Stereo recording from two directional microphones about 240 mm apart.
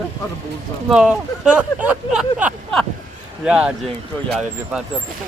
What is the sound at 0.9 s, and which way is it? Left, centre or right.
Speech, centre.